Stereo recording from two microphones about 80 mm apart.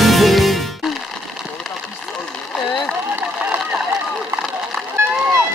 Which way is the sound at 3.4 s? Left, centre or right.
Centre.